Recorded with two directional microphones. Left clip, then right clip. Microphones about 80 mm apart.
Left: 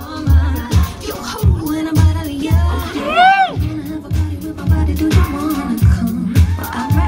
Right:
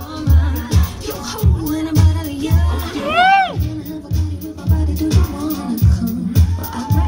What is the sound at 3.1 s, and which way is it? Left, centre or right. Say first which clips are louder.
Music: left 2 dB; right.